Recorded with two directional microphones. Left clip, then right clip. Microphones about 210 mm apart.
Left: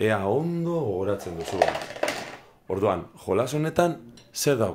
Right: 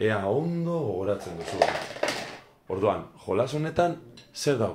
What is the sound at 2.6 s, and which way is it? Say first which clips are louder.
Speech: left 1 dB; 50° left (ahead or behind).